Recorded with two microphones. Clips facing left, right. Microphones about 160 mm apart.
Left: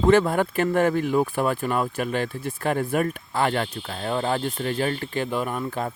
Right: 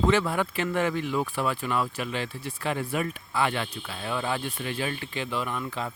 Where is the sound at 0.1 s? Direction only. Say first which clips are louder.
Left 6 dB; 50° left (ahead or behind).